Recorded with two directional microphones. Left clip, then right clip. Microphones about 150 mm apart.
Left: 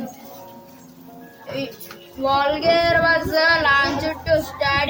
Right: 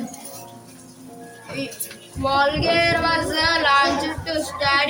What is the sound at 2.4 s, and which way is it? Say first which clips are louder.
Child singing: even; 45° left (ahead or behind).